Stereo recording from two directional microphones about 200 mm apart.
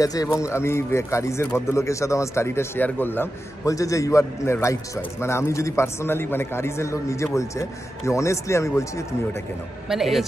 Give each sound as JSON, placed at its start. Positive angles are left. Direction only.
{"t": 0.0, "sound": "speech", "side_deg": 15}
{"t": 9.8, "sound": "a man's voice", "side_deg": 0}